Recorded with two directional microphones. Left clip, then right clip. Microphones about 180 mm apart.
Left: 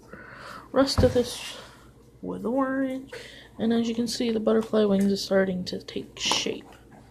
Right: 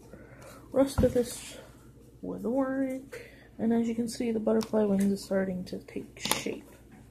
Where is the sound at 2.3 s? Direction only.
25° left (ahead or behind).